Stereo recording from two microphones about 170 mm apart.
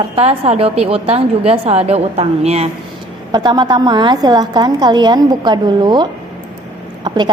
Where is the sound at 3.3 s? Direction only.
25° right (ahead or behind).